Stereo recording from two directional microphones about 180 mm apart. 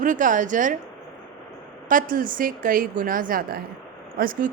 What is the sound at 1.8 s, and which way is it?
Speech, 50° right (ahead or behind).